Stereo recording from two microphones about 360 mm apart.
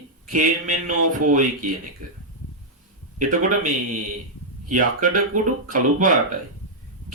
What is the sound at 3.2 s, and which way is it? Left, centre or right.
Speech, right.